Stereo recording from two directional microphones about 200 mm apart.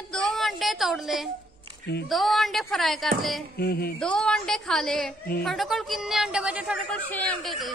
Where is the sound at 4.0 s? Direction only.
5° left (ahead or behind).